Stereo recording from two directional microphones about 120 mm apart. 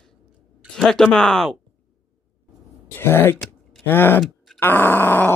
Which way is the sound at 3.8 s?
15° left (ahead or behind).